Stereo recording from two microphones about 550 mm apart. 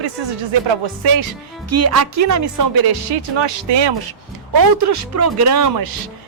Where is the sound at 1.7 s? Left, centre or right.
Right.